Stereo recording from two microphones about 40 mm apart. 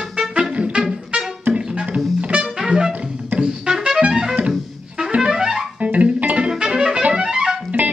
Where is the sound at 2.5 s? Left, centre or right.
Centre.